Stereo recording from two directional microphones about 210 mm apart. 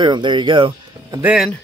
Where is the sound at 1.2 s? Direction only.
5° right (ahead or behind).